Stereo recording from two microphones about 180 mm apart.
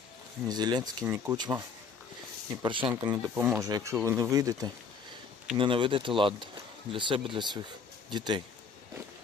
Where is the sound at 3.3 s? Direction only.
10° right (ahead or behind).